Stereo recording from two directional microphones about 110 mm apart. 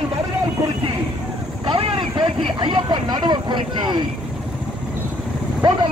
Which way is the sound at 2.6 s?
45° right (ahead or behind).